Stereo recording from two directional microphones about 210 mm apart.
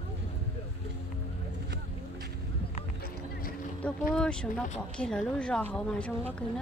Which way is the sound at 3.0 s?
45° left (ahead or behind).